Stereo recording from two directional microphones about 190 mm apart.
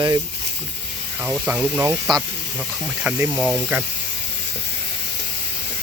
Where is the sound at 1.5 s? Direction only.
10° right (ahead or behind).